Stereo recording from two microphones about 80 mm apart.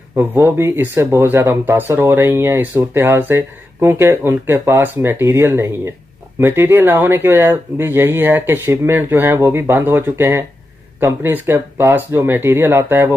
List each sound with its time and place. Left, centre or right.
0.2 s speech: right